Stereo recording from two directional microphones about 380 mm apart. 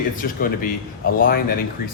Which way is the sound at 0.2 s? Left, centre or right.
Left.